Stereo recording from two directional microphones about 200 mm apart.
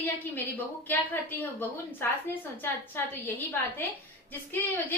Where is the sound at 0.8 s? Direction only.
10° left (ahead or behind).